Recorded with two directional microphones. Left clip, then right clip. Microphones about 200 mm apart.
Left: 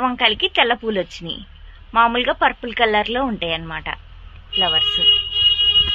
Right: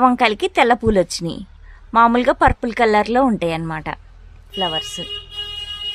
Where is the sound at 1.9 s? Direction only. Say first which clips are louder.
Right 3 dB; 60° right (ahead or behind).